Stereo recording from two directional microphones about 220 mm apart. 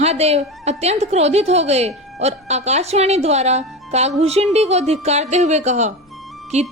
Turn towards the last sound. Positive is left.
turn(degrees=0)  # may be behind; listen again after turning